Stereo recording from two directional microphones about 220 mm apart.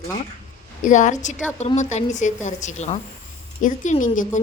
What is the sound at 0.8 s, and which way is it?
A woman's voice, 35° left (ahead or behind).